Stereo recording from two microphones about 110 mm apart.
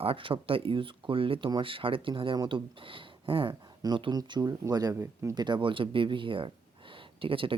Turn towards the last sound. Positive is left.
turn(degrees=-55)  # may be behind; listen again after turning